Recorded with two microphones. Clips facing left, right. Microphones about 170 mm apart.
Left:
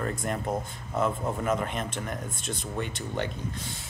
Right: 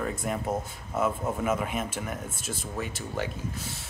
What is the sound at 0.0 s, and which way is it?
Speech, 5° right (ahead or behind).